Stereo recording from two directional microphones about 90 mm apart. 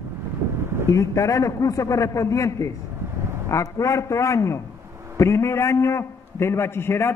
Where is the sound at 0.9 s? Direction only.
35° left (ahead or behind).